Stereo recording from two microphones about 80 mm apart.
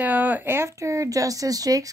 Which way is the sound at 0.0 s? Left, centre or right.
Right.